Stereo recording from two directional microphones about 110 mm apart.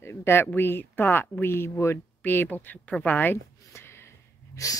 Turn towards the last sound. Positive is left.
turn(degrees=30)  # may be behind; listen again after turning